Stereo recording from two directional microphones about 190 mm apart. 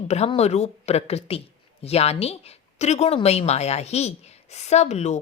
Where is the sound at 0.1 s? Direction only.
35° left (ahead or behind).